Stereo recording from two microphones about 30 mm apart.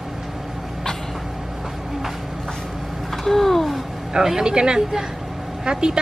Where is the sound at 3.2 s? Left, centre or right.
Centre.